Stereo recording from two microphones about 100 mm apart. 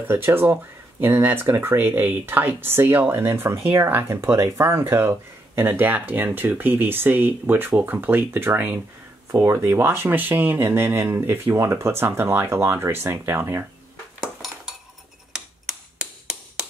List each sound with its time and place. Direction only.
0.1 s speech: 20° right (ahead or behind)
14.2 s dishes: 5° right (ahead or behind)